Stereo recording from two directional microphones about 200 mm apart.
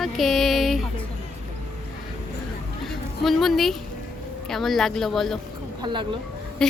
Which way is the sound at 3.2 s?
Centre (ahead or behind).